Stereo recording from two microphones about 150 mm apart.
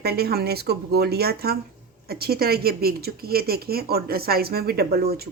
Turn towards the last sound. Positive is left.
turn(degrees=-90)